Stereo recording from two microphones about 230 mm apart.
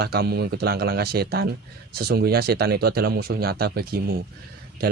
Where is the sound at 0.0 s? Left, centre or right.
Right.